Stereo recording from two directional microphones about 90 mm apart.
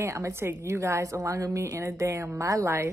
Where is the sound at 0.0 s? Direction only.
30° right (ahead or behind).